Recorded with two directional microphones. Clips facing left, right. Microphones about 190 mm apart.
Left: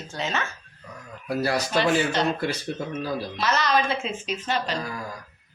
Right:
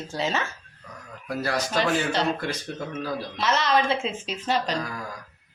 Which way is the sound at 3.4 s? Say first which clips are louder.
Right 1 dB; 25° right (ahead or behind).